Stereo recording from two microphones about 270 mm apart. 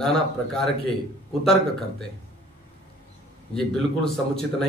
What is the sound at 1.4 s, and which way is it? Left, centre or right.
Speech, centre.